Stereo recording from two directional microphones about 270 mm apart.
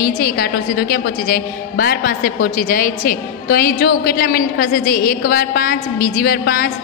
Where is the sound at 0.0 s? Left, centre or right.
Left.